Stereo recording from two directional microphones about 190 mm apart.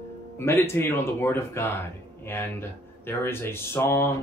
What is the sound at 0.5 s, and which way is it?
Speech, 15° left (ahead or behind).